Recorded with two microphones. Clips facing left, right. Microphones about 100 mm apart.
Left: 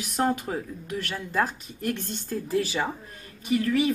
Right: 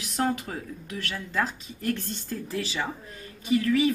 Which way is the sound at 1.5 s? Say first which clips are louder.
Even; 55° left (ahead or behind).